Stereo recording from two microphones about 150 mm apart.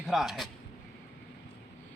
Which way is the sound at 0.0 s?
Centre (ahead or behind).